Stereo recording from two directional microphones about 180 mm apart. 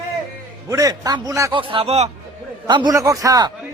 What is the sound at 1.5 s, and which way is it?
A man's voice, 30° right (ahead or behind).